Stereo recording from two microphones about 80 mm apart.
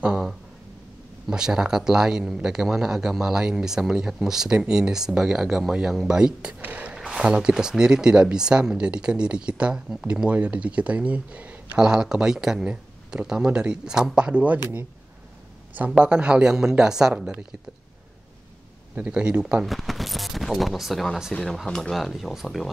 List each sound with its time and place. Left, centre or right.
0.0 s a sound: centre
1.3 s speech: centre
15.7 s speech: centre
18.9 s speech: centre
19.6 s speech: centre